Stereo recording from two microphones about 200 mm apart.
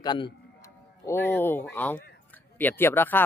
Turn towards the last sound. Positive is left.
turn(degrees=10)  # may be behind; listen again after turning